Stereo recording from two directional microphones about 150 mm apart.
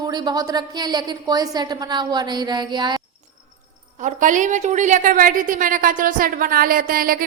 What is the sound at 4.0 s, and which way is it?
A woman's voice, 55° right (ahead or behind).